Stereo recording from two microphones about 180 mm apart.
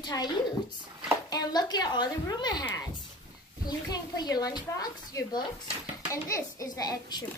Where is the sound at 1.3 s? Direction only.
20° left (ahead or behind).